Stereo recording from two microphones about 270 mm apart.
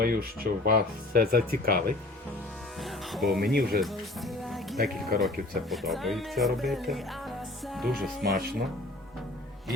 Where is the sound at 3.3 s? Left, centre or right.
Right.